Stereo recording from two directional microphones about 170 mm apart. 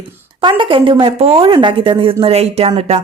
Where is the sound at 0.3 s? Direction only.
30° right (ahead or behind).